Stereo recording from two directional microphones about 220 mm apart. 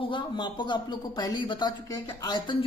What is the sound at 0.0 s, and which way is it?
A man's voice, 20° left (ahead or behind).